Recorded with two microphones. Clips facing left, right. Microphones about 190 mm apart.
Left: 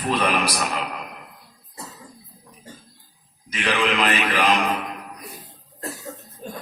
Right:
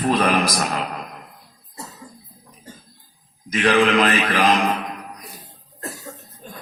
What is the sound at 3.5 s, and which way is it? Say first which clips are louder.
Speech: right 6 dB; 45° right (ahead or behind).